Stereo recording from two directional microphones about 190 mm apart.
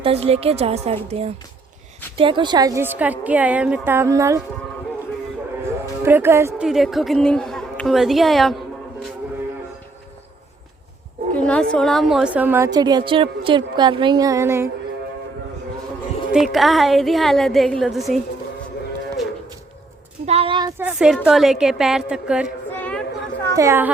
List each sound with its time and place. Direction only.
0.0 s a woman's voice: 30° right (ahead or behind); by 4.4 s 15° right (ahead or behind)
6.1 s a woman's voice: 10° right (ahead or behind)
6.7 s a woman's voice: centre (ahead or behind)
11.3 s a woman's voice: 5° left (ahead or behind); by 14.7 s 15° right (ahead or behind)
16.3 s a woman's voice: centre (ahead or behind)
20.2 s speech: 30° right (ahead or behind)
20.8 s a woman's voice: 5° right (ahead or behind)
22.7 s a sound: 5° left (ahead or behind)
23.6 s a woman's voice: 15° right (ahead or behind)